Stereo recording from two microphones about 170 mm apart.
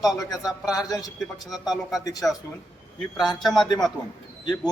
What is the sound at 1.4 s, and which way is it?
Speech, centre (ahead or behind).